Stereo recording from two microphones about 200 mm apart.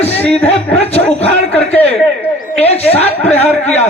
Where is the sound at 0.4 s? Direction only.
30° left (ahead or behind).